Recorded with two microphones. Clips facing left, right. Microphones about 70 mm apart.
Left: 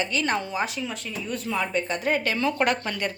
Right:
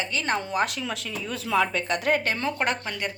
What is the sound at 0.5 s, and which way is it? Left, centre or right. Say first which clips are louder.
Speech: right 2 dB; right.